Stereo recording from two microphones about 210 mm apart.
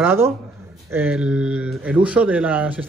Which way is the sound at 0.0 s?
10° right (ahead or behind).